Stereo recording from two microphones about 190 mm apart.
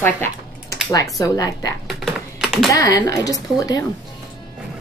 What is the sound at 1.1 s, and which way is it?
Speech, 20° left (ahead or behind).